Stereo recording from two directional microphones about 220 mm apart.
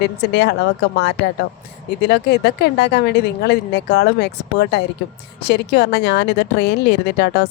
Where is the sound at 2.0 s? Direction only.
50° left (ahead or behind).